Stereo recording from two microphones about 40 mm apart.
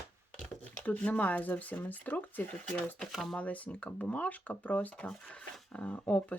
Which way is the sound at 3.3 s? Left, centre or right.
Left.